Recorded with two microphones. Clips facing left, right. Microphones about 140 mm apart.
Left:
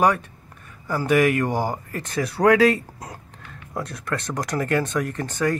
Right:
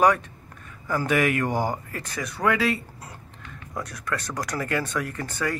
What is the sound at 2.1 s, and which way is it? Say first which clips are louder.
Speech: left 8 dB; 35° left (ahead or behind).